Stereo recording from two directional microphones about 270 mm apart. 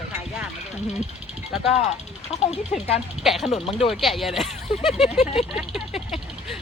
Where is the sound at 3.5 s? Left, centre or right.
Left.